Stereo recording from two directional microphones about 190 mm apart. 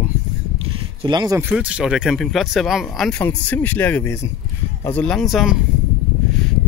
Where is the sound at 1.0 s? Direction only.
20° right (ahead or behind).